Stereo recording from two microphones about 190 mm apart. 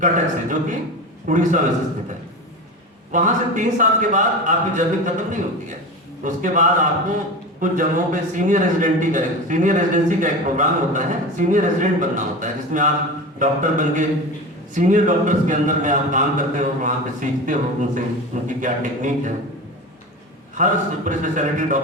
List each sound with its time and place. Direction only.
0.0 s a man's voice: 40° right (ahead or behind)
3.1 s a man's voice: 45° right (ahead or behind)
20.6 s a man's voice: 40° right (ahead or behind)